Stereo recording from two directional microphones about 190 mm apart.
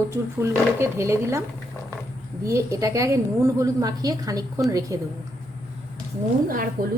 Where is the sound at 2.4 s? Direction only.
15° right (ahead or behind).